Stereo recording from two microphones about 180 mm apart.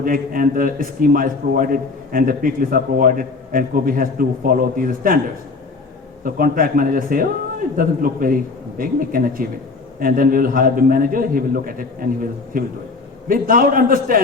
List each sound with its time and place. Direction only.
0.0 s a man's voice: 50° right (ahead or behind)
6.2 s a man's voice: 50° right (ahead or behind)